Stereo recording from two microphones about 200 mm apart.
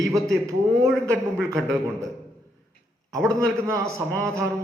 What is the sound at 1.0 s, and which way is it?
A man's voice, 15° right (ahead or behind).